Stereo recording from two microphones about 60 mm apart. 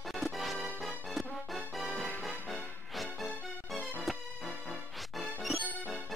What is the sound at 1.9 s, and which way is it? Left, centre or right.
Music, centre.